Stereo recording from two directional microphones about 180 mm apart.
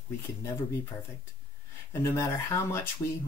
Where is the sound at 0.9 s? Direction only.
20° left (ahead or behind).